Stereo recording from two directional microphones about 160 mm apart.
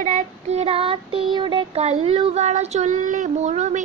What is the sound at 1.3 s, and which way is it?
Speech, 30° right (ahead or behind).